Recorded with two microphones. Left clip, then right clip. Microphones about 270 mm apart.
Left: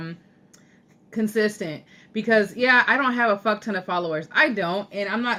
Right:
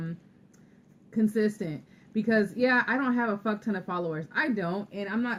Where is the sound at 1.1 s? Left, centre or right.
Centre.